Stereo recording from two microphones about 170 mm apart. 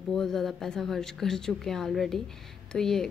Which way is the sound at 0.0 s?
5° left (ahead or behind).